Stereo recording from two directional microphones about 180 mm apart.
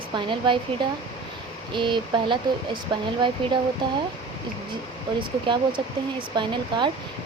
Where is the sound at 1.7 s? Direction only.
25° right (ahead or behind).